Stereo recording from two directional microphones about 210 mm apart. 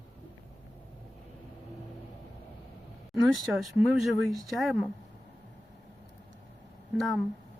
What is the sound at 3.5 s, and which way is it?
Speech, centre (ahead or behind).